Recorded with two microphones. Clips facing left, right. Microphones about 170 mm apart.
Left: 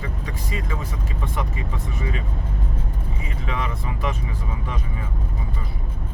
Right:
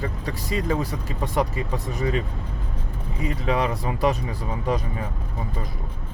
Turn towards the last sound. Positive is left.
turn(degrees=-40)  # may be behind; listen again after turning